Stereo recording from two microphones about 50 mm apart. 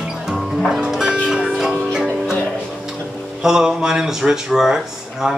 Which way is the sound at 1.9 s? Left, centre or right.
Centre.